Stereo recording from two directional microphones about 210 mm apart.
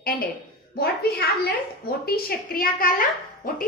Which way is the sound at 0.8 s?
50° left (ahead or behind).